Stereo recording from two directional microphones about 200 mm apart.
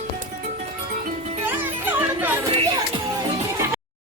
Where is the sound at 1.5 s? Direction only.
10° right (ahead or behind).